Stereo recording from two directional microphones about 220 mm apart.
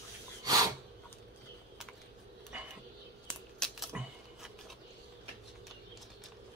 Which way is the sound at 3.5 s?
Centre (ahead or behind).